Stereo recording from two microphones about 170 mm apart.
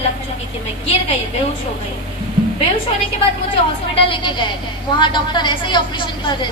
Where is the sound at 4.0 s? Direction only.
30° left (ahead or behind).